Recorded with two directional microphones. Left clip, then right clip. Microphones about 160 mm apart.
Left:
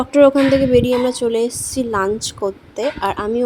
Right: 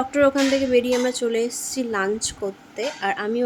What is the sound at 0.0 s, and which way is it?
A woman's voice, 30° left (ahead or behind).